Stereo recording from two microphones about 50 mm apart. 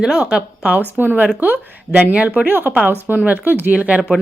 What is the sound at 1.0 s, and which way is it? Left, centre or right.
Speech, right.